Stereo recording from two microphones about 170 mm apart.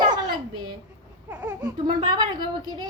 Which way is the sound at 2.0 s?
25° right (ahead or behind).